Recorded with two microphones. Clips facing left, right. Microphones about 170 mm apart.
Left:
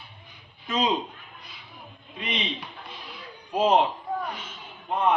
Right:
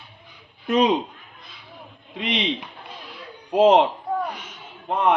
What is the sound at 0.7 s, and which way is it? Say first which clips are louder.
Speech: right 7 dB; 65° right (ahead or behind).